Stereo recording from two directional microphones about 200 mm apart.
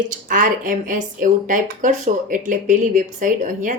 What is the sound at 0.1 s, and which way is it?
Speech, 40° right (ahead or behind).